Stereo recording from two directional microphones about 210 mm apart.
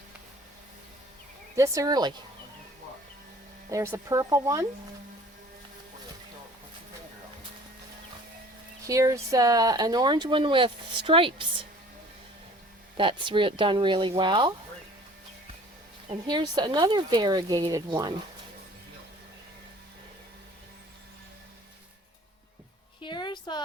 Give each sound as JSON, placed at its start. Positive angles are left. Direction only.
{"t": 1.5, "sound": "speech", "side_deg": -15}
{"t": 3.7, "sound": "speech", "side_deg": -15}
{"t": 8.9, "sound": "speech", "side_deg": -15}
{"t": 13.0, "sound": "speech", "side_deg": -25}
{"t": 16.0, "sound": "speech", "side_deg": -20}
{"t": 23.0, "sound": "a sound", "side_deg": 20}